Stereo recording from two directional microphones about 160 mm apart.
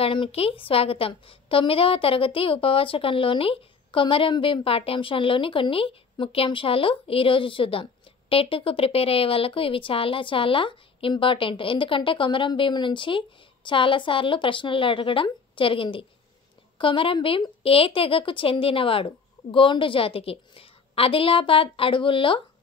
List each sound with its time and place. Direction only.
0.0 s a woman's voice: 35° left (ahead or behind)